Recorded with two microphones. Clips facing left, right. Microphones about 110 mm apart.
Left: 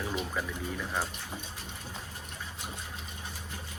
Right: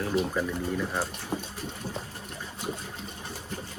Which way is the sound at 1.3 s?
45° right (ahead or behind).